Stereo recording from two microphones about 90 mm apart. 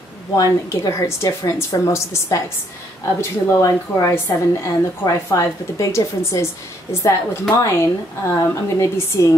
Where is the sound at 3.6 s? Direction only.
35° left (ahead or behind).